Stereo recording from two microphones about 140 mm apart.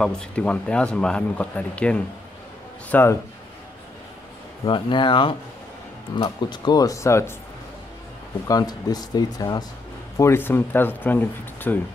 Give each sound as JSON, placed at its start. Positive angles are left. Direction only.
{"t": 0.0, "sound": "speech", "side_deg": 5}
{"t": 4.6, "sound": "speech", "side_deg": 35}
{"t": 8.5, "sound": "speech", "side_deg": 25}